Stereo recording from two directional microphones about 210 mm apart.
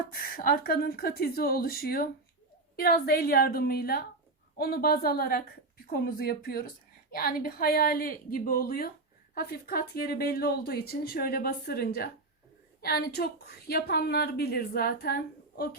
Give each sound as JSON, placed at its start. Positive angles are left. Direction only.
{"t": 0.1, "sound": "a woman's voice", "side_deg": 45}